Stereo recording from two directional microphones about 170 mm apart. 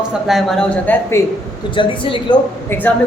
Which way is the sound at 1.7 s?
30° left (ahead or behind).